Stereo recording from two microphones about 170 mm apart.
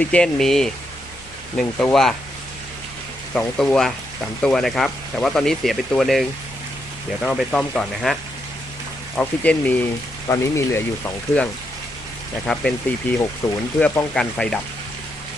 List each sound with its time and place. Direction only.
0.0 s speech: 5° left (ahead or behind)
3.3 s speech: 5° left (ahead or behind)
12.5 s speech: 5° left (ahead or behind)